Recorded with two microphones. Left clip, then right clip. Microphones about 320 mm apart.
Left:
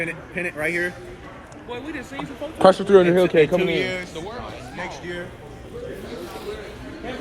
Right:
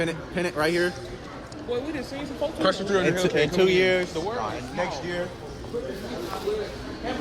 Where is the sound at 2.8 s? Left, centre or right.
Centre.